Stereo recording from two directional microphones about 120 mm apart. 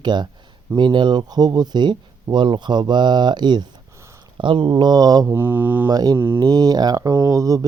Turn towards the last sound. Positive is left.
turn(degrees=-30)  # may be behind; listen again after turning